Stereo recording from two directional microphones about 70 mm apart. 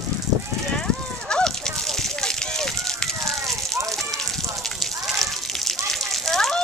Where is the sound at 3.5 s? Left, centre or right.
Centre.